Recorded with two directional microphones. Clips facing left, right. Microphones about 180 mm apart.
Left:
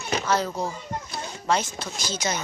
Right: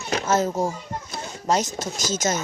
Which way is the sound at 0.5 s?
45° right (ahead or behind).